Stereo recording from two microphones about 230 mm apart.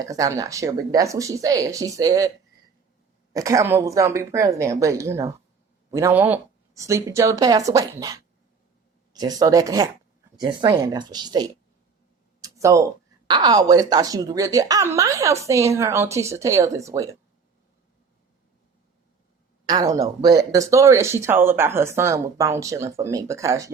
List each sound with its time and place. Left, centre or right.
0.0 s speech: centre
3.3 s speech: centre
19.6 s speech: centre